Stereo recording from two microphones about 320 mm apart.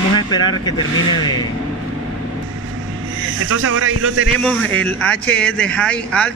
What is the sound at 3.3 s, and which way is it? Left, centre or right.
Speech, right.